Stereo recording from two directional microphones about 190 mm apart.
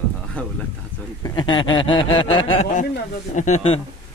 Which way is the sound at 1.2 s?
20° left (ahead or behind).